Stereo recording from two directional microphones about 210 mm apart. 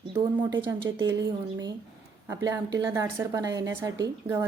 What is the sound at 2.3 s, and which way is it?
A woman's voice, 15° right (ahead or behind).